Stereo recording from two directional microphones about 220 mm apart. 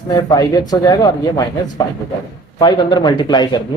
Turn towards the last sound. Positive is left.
turn(degrees=20)  # may be behind; listen again after turning